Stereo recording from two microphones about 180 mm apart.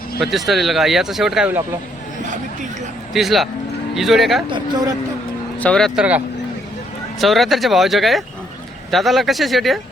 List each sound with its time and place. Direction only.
0.2 s speech: centre (ahead or behind)
2.2 s chatter: 45° right (ahead or behind)
3.1 s speech: centre (ahead or behind)
4.4 s speech: 25° right (ahead or behind)
5.5 s speech: 5° left (ahead or behind)
7.2 s speech: centre (ahead or behind)